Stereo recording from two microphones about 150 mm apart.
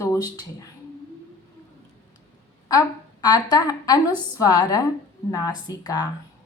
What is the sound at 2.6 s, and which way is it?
A woman's voice, 25° left (ahead or behind).